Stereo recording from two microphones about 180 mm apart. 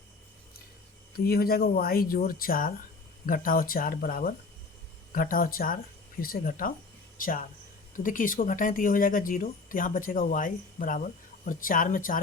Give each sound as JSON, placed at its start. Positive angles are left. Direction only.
{"t": 1.1, "sound": "speech", "side_deg": 55}